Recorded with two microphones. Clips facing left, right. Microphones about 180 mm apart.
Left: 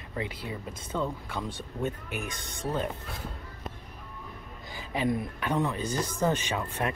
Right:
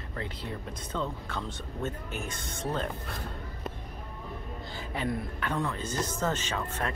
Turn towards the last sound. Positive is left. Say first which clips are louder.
# left 2 dB
turn(degrees=15)  # may be behind; listen again after turning